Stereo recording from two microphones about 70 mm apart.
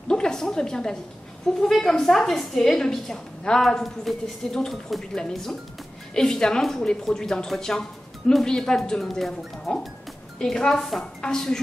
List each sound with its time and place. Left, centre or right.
0.1 s a woman's voice: centre